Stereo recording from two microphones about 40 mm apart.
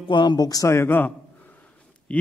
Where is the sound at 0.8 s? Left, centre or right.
Left.